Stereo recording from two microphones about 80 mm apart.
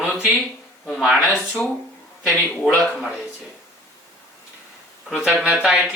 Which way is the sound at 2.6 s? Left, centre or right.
Centre.